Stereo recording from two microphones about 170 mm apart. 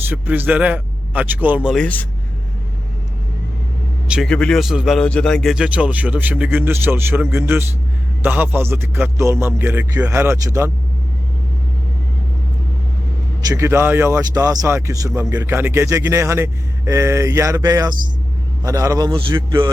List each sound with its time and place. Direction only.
0.0 s a man's voice: 10° right (ahead or behind)
1.7 s a man's voice: 10° left (ahead or behind)
4.1 s speech: centre (ahead or behind); by 10.7 s 20° right (ahead or behind)
13.4 s a man's voice: 20° right (ahead or behind)